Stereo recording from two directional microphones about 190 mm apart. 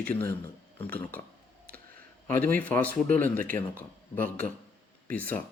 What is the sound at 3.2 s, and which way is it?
Speech, 45° right (ahead or behind).